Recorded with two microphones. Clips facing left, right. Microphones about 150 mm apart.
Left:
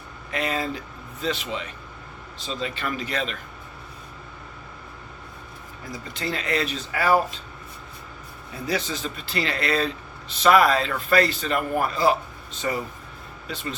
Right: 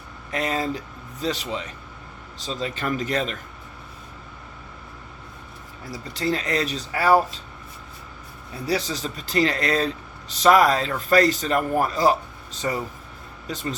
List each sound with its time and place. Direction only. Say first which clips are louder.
0.3 s speech: right 2 dB; 40° right (ahead or behind)
5.9 s speech: right 5 dB; 35° right (ahead or behind)
8.6 s speech: right 2 dB; 35° right (ahead or behind)
13.5 s speech: right 3 dB; 40° right (ahead or behind)